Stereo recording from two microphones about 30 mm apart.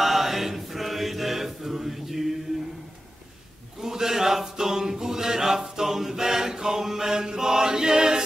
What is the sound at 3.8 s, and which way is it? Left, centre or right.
Chant, centre.